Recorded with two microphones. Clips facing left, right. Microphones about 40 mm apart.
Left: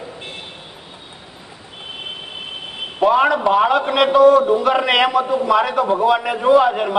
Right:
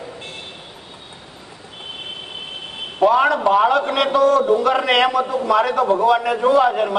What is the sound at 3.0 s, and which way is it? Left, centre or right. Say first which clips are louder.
A man's voice: even; centre.